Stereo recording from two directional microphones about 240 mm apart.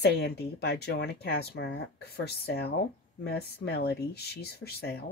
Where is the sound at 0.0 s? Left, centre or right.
Left.